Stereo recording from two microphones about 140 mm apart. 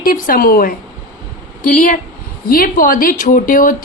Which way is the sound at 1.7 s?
70° left (ahead or behind).